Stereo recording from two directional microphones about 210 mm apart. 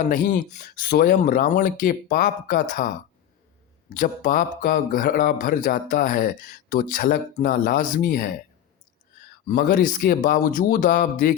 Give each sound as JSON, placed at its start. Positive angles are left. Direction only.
{"t": 0.0, "sound": "speech", "side_deg": 40}
{"t": 9.5, "sound": "speech", "side_deg": 40}